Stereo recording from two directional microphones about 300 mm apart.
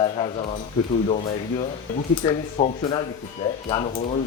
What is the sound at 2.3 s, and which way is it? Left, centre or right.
Speech, centre.